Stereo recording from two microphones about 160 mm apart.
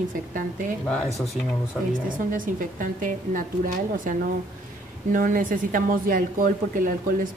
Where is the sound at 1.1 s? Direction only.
Centre (ahead or behind).